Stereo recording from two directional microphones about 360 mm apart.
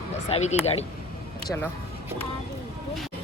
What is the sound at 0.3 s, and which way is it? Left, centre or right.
Speech, centre.